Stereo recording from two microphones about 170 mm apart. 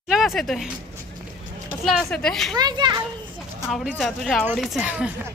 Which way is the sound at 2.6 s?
25° right (ahead or behind).